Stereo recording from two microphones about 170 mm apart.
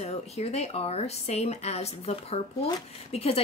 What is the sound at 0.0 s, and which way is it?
Speech, 40° left (ahead or behind).